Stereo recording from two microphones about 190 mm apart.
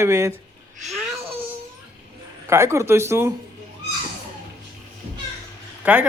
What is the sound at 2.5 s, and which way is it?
Speech, 15° right (ahead or behind).